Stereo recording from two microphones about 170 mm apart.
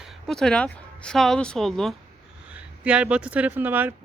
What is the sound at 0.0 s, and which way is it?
Speech, 5° left (ahead or behind).